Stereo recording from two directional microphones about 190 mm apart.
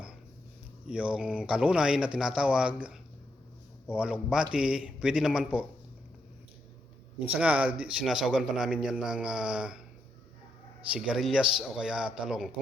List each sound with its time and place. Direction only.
0.9 s a man's voice: 5° right (ahead or behind)
7.2 s a man's voice: 5° right (ahead or behind)
10.8 s a man's voice: 5° right (ahead or behind)